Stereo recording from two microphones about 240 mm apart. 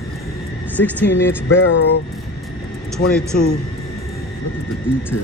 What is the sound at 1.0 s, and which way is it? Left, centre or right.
Music, left.